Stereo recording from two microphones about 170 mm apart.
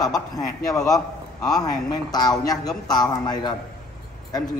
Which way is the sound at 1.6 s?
25° left (ahead or behind).